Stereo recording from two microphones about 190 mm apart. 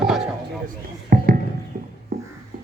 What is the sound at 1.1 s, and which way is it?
Music, 50° right (ahead or behind).